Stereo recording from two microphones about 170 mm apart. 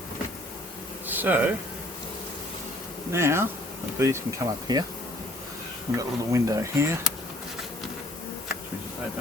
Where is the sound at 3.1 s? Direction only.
15° right (ahead or behind).